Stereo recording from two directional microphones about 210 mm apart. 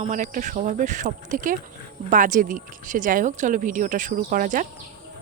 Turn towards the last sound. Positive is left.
turn(degrees=-40)  # may be behind; listen again after turning